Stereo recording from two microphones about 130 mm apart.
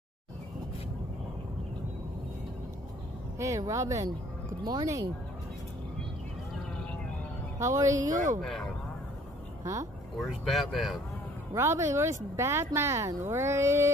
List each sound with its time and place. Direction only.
3.3 s speech: 25° right (ahead or behind)
7.5 s a woman's voice: 25° right (ahead or behind)
8.0 s speech: 80° right
10.1 s speech: centre (ahead or behind)
11.5 s speech: 20° right (ahead or behind)